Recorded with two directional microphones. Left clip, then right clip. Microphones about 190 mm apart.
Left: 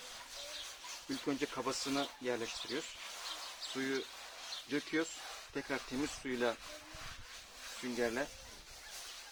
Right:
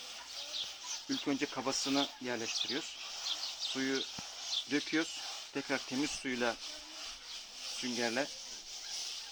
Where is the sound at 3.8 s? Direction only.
45° right (ahead or behind).